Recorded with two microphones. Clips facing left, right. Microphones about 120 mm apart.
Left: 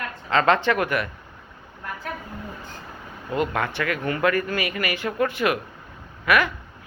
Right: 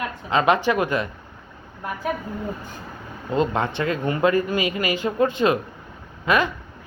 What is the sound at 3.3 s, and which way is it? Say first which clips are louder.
Speech: right 3 dB; 25° right (ahead or behind).